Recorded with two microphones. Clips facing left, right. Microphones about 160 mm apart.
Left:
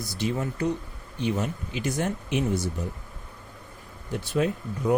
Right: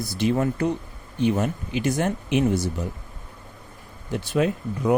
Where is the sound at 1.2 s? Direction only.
55° right (ahead or behind); by 2.4 s 75° right (ahead or behind).